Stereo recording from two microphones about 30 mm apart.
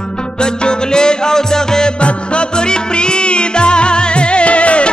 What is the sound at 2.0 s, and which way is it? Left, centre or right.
Music, left.